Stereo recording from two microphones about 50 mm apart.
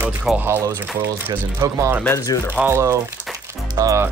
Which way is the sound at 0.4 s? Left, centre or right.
Right.